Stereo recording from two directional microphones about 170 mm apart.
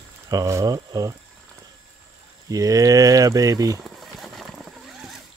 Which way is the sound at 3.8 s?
Centre (ahead or behind).